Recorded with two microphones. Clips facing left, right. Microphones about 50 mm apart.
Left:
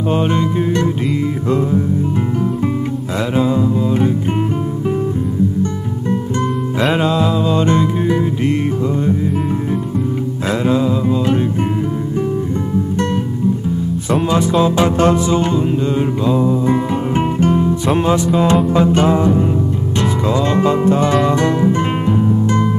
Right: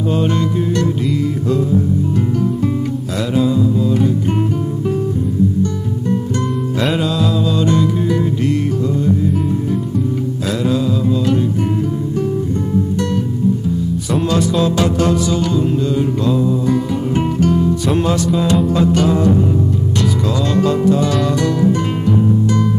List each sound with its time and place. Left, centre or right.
0.1 s music: left
3.3 s music: left
6.9 s music: left
14.3 s music: left